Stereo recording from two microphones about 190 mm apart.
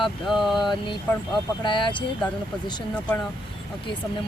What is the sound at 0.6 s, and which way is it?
Speech, 25° left (ahead or behind).